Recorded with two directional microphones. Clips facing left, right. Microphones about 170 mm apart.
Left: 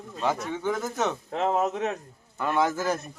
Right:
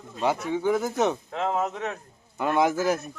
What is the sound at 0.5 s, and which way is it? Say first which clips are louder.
Speech: right 4 dB; 10° right (ahead or behind).